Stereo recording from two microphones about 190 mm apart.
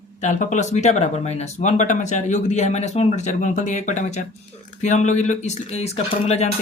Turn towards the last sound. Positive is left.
turn(degrees=35)  # may be behind; listen again after turning